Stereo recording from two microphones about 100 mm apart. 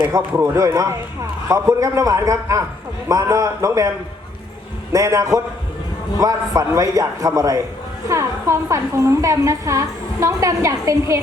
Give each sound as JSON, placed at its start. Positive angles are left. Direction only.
{"t": 0.0, "sound": "a woman's voice", "side_deg": -35}